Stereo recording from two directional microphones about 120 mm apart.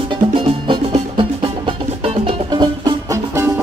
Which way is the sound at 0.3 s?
45° right (ahead or behind).